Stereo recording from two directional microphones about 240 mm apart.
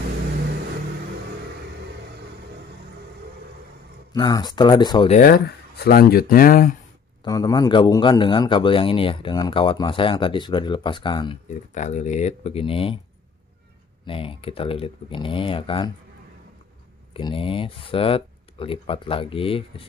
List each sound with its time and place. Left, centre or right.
4.1 s speech: centre
5.1 s speech: left
7.2 s a man's voice: centre
14.0 s a man's voice: left
17.1 s a man's voice: left